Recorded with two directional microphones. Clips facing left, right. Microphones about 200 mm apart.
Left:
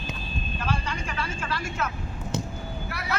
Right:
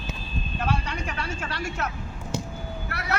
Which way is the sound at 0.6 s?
65° right (ahead or behind).